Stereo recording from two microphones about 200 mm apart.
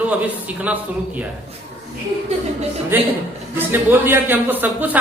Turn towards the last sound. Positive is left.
turn(degrees=-10)  # may be behind; listen again after turning